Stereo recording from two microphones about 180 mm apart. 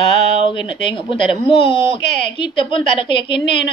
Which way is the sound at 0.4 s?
30° left (ahead or behind).